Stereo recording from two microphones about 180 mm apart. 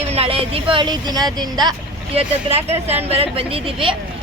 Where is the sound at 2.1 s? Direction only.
35° right (ahead or behind).